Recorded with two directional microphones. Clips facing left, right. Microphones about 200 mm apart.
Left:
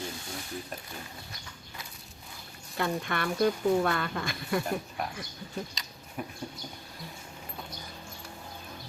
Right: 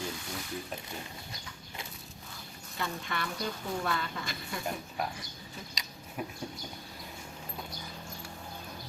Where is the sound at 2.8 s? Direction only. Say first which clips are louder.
Left 6 dB; 55° left (ahead or behind).